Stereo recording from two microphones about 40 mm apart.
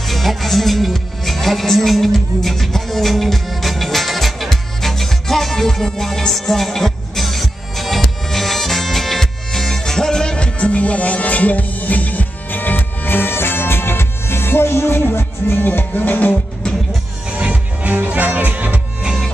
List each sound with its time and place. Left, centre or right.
0.0 s music: centre; by 16.3 s left
17.4 s music: right
18.0 s speech: right